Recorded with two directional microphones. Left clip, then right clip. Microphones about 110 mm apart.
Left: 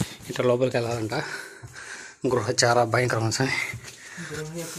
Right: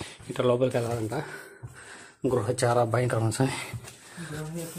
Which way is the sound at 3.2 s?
30° right (ahead or behind).